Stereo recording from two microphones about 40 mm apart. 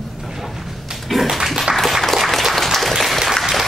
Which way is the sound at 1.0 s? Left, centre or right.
Centre.